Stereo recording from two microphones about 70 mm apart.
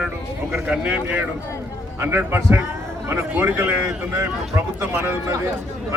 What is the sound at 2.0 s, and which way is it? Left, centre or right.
A man's voice, right.